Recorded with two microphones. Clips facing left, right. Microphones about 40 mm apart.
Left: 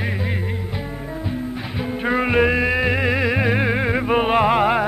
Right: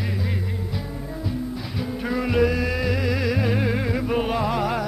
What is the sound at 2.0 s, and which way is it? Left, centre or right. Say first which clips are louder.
Music: left 4 dB; left.